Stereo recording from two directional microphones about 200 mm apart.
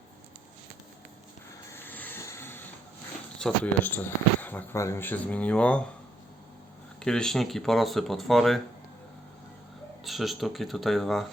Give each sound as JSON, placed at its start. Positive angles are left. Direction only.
{"t": 1.7, "sound": "a sound", "side_deg": 10}
{"t": 3.3, "sound": "speech", "side_deg": 5}
{"t": 7.0, "sound": "speech", "side_deg": 5}
{"t": 10.0, "sound": "speech", "side_deg": 0}